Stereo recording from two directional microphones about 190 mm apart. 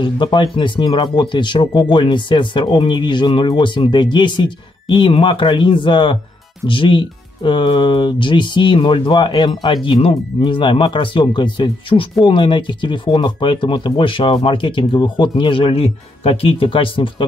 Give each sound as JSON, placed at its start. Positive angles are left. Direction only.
{"t": 0.0, "sound": "speech", "side_deg": 25}